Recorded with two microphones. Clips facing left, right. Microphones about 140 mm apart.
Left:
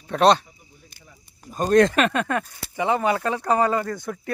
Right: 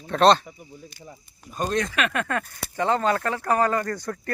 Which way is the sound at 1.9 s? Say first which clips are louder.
Left 5 dB; 35° left (ahead or behind).